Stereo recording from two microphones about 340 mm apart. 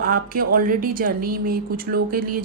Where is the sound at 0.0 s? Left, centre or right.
Right.